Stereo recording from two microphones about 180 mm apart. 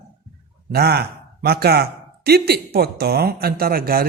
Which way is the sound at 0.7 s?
60° right (ahead or behind).